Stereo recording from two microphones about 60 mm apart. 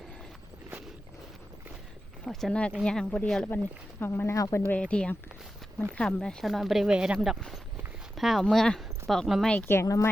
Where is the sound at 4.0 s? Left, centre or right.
Left.